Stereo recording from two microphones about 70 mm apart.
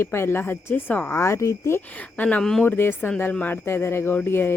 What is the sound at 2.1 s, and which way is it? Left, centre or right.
Speech, left.